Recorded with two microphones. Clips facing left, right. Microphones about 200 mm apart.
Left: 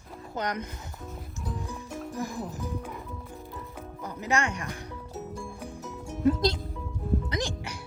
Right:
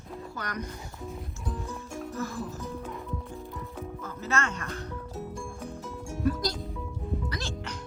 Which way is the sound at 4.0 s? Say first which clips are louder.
Left 3 dB; 15° left (ahead or behind).